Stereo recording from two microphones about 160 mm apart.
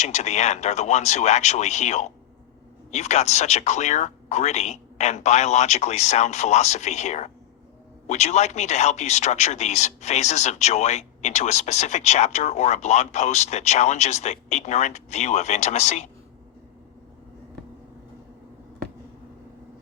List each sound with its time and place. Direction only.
0.0 s speech: 45° left (ahead or behind)